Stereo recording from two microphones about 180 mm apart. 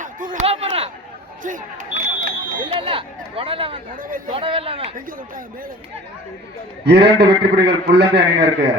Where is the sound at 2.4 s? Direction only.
30° right (ahead or behind).